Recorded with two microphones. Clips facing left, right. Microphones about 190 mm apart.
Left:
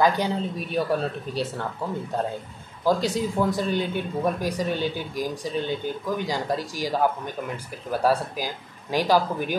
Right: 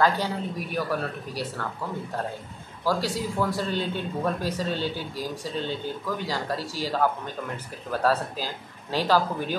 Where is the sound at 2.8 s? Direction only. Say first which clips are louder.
Left 4 dB; 20° left (ahead or behind).